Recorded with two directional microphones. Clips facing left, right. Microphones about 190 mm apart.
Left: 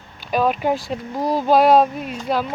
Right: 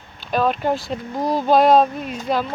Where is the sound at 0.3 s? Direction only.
10° left (ahead or behind).